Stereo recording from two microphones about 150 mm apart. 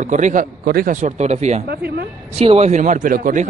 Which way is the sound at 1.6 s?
90° right.